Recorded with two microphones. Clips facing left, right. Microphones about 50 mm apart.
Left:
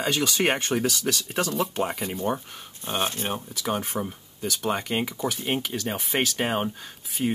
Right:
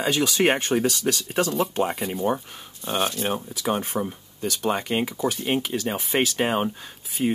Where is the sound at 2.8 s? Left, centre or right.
Left.